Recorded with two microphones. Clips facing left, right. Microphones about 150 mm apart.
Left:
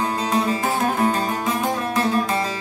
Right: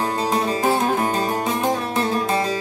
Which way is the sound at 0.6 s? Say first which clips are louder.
Right 2 dB; 25° right (ahead or behind).